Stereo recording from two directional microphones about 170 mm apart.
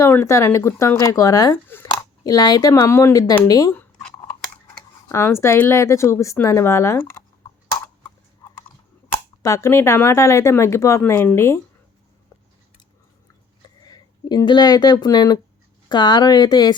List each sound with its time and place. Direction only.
0.0 s speech: 15° left (ahead or behind)
5.0 s speech: 15° left (ahead or behind)
9.4 s speech: 20° left (ahead or behind)
13.8 s speech: 25° left (ahead or behind)